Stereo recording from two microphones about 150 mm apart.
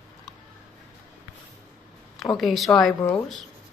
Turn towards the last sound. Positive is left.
turn(degrees=15)  # may be behind; listen again after turning